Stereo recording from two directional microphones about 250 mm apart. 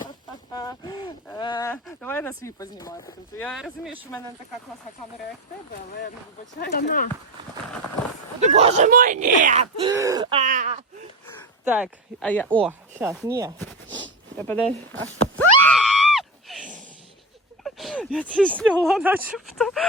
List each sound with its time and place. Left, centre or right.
0.5 s a sound: centre
3.3 s speech: centre
6.6 s speech: left
8.4 s speech: right
9.8 s speech: centre
10.4 s speech: right
11.6 s speech: centre
12.2 s speech: centre
12.6 s speech: centre
14.3 s speech: centre
15.1 s a sound: centre
17.6 s speech: centre